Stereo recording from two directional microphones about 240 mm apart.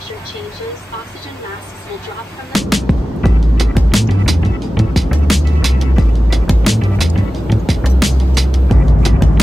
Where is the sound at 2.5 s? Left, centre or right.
Centre.